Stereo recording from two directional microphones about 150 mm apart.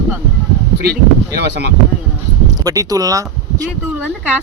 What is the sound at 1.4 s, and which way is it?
Speech, 90° right.